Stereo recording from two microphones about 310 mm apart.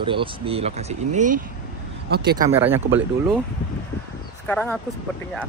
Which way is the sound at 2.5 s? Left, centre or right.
Centre.